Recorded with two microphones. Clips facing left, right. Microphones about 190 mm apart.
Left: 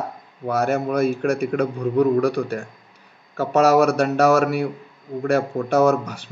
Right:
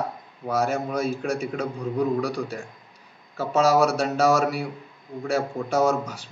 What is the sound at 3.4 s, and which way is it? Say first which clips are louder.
Speech: left 4 dB; 65° left (ahead or behind).